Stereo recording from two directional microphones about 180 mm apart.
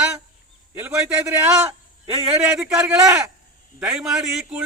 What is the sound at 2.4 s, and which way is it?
A man's voice, 5° right (ahead or behind).